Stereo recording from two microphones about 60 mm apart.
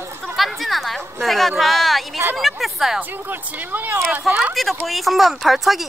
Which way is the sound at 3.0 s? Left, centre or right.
Right.